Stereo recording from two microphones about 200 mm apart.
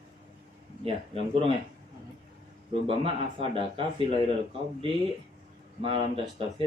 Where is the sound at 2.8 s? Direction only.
30° right (ahead or behind).